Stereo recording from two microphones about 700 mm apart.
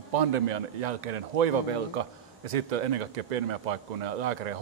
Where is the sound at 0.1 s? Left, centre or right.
Right.